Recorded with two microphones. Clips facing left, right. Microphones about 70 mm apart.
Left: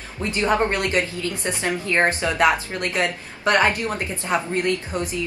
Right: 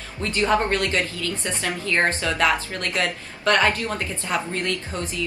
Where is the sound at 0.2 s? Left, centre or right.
Centre.